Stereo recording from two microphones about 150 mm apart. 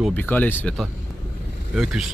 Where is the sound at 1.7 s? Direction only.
5° right (ahead or behind).